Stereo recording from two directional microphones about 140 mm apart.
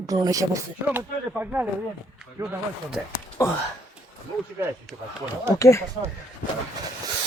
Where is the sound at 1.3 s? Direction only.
10° right (ahead or behind).